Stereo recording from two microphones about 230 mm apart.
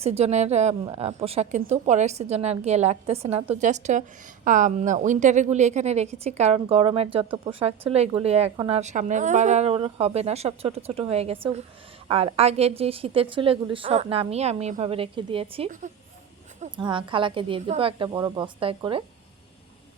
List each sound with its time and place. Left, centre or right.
0.0 s a woman's voice: right